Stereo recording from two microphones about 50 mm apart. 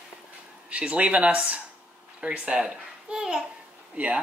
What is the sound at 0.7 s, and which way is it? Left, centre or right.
A child's voice, right.